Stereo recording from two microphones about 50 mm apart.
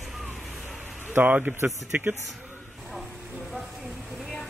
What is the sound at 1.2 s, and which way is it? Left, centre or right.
Speech, right.